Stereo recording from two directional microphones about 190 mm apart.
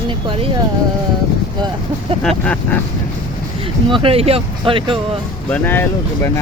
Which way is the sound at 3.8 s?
30° right (ahead or behind).